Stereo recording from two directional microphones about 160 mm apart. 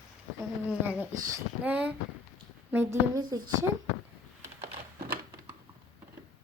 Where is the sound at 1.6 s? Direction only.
10° right (ahead or behind).